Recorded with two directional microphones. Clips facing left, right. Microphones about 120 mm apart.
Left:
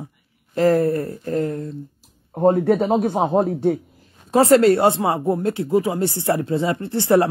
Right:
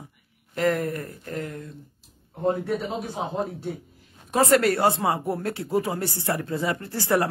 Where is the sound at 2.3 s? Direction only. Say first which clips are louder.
Left 9 dB; 50° left (ahead or behind).